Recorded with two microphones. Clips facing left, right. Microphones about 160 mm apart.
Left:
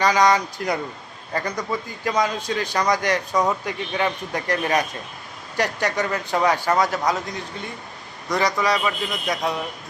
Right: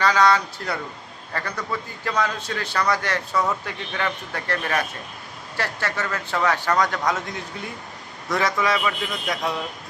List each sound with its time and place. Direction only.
0.0 s a man's voice: 15° left (ahead or behind)